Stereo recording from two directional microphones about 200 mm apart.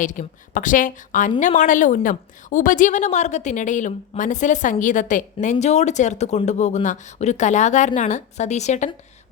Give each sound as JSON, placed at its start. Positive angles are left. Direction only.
{"t": 0.0, "sound": "a woman's voice", "side_deg": 40}